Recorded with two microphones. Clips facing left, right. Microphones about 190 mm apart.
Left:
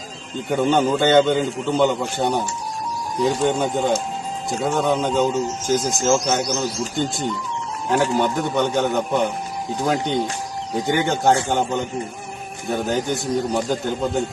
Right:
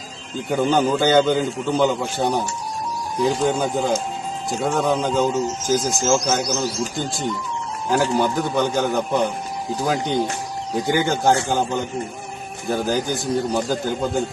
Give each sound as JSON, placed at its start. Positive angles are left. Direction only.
{"t": 0.4, "sound": "a man's voice", "side_deg": 0}
{"t": 7.9, "sound": "a man's voice", "side_deg": 0}